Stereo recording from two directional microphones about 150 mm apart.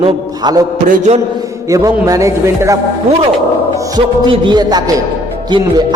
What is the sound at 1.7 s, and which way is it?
A man's voice, 20° right (ahead or behind).